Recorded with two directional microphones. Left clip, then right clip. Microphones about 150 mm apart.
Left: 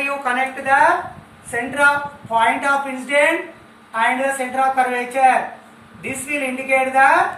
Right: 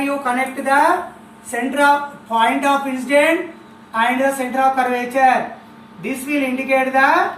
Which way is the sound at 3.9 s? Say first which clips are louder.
Right 1 dB; 15° left (ahead or behind).